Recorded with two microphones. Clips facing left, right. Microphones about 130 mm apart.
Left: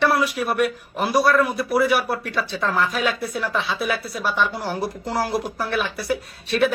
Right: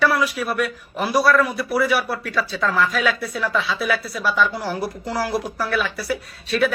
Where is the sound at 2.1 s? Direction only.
20° left (ahead or behind).